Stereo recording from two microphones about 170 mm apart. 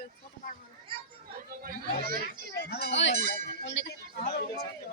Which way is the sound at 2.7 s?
80° left.